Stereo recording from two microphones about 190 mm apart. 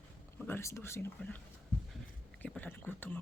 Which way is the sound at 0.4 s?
15° left (ahead or behind).